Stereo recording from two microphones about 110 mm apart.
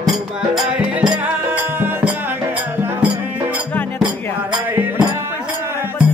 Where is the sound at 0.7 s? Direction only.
10° right (ahead or behind).